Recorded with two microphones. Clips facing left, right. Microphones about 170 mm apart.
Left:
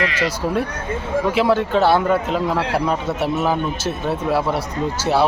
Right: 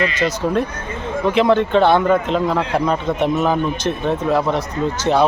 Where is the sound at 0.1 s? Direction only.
10° left (ahead or behind).